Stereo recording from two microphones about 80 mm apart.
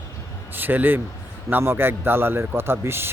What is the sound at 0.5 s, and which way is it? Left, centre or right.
A man's voice, right.